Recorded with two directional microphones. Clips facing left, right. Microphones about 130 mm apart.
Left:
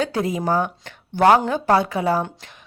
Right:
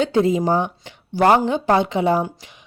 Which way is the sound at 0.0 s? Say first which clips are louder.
Right 5 dB; 25° right (ahead or behind).